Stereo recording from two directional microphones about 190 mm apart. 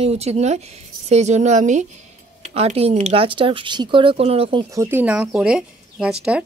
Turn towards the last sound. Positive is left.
turn(degrees=-5)  # may be behind; listen again after turning